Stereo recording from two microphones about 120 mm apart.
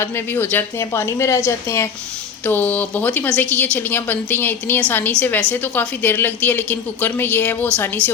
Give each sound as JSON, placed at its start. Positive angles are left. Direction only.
{"t": 0.0, "sound": "a woman's voice", "side_deg": 20}